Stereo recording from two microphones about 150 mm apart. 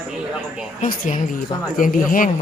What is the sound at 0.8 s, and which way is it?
Speech, 60° left (ahead or behind).